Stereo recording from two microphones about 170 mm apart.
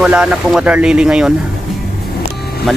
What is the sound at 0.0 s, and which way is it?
Speech, 5° right (ahead or behind).